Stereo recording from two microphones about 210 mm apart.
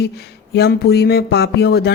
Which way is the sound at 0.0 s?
50° left (ahead or behind).